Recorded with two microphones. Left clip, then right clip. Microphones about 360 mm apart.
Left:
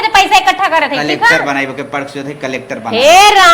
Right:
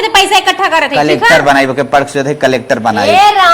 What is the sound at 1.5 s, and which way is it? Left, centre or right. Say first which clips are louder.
A man's voice: right 8 dB; right.